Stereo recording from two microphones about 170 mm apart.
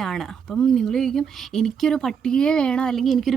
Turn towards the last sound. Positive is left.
turn(degrees=0)  # may be behind; listen again after turning